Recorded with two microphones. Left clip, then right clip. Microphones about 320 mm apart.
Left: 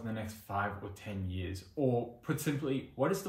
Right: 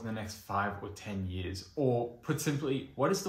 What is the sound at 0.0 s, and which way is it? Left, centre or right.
Speech, centre.